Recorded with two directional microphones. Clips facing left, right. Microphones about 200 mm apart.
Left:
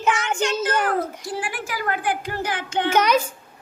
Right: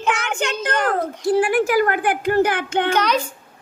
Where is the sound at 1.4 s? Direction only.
60° right (ahead or behind).